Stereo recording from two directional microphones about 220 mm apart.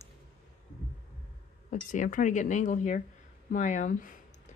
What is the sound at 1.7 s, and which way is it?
Speech, 35° left (ahead or behind).